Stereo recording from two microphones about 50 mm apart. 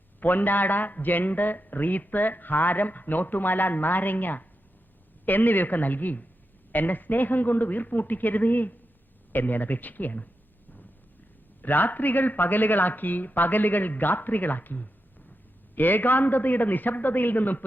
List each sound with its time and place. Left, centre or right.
0.2 s a man's voice: left
11.6 s a man's voice: left